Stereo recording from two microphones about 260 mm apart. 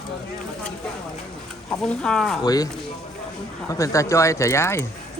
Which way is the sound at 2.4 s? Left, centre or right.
Centre.